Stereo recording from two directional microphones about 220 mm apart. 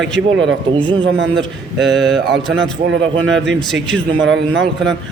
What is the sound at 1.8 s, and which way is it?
Speech, centre (ahead or behind).